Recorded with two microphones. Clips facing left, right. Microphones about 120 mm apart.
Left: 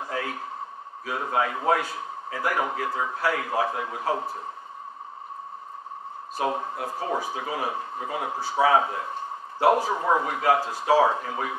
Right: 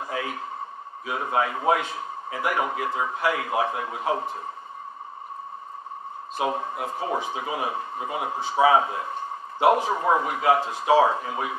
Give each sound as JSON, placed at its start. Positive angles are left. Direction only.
{"t": 0.1, "sound": "a sound", "side_deg": -15}
{"t": 1.3, "sound": "a man's voice", "side_deg": -15}
{"t": 6.3, "sound": "a man's voice", "side_deg": -15}